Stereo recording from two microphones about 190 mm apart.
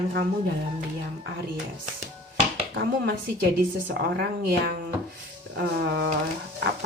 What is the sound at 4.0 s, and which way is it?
Speech, 55° right (ahead or behind).